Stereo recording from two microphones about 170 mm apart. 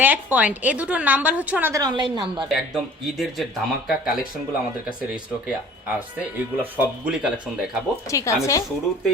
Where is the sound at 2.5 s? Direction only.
Centre (ahead or behind).